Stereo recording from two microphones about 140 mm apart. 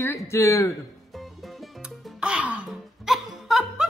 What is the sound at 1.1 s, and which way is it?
Music, centre (ahead or behind).